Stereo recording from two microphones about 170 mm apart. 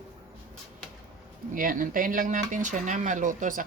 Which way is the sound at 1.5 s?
55° right (ahead or behind).